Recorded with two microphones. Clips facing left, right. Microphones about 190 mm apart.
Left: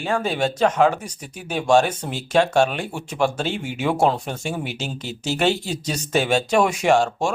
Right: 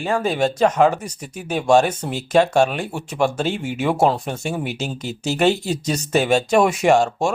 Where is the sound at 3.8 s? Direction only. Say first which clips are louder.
Right 1 dB; 5° right (ahead or behind).